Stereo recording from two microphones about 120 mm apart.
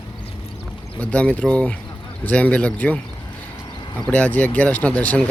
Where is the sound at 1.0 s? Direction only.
10° left (ahead or behind).